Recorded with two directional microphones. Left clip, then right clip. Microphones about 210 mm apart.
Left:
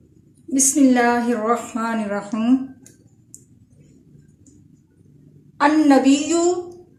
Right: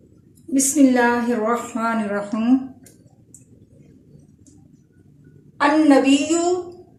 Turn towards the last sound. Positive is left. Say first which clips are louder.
# even
turn(degrees=40)  # may be behind; listen again after turning